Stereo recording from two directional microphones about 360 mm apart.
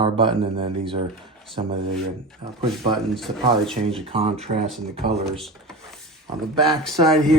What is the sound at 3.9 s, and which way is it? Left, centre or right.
Speech, centre.